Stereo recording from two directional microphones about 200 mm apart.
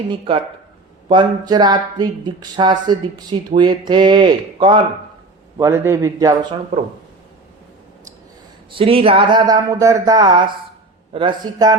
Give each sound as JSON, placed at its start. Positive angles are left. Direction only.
{"t": 0.1, "sound": "speech", "side_deg": -25}
{"t": 5.5, "sound": "a man's voice", "side_deg": -15}
{"t": 6.7, "sound": "speech", "side_deg": -30}
{"t": 8.7, "sound": "speech", "side_deg": -30}